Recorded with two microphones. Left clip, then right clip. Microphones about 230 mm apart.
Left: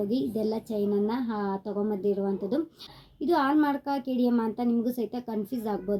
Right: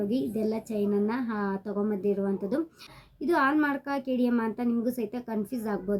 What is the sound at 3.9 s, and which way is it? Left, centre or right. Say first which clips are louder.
Speech: right 1 dB; right.